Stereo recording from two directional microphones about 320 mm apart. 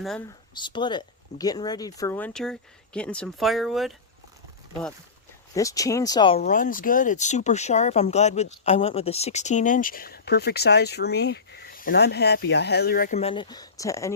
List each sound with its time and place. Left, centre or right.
0.0 s speech: centre
0.5 s speech: centre
5.5 s speech: centre
6.4 s speech: left; by 14.1 s centre